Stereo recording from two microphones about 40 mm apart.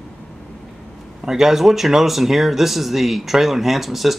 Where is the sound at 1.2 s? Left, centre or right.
Centre.